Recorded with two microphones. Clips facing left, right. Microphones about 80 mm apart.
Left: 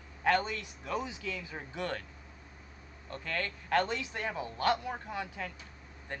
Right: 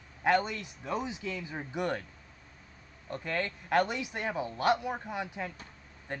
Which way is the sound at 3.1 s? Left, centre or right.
Centre.